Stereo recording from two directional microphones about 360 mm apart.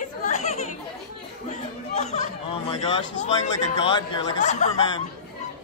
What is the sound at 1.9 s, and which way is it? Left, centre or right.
Chatter, centre.